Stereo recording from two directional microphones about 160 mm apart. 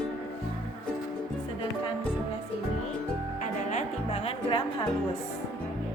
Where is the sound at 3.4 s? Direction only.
50° left (ahead or behind).